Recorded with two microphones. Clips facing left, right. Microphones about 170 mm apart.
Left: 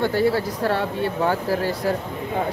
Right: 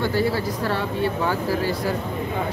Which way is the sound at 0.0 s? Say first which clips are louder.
Left 2 dB; 55° left (ahead or behind).